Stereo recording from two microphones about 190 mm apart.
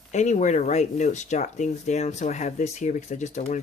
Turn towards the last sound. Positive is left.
turn(degrees=40)  # may be behind; listen again after turning